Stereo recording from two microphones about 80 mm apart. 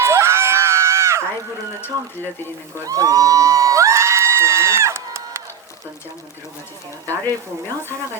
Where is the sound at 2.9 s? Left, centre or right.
Right.